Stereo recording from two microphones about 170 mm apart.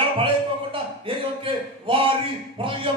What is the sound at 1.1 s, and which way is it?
Speech, 30° right (ahead or behind).